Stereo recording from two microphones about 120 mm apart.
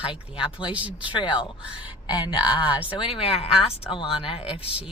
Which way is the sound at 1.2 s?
40° left (ahead or behind).